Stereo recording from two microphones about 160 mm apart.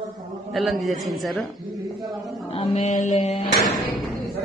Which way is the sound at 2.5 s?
40° left (ahead or behind).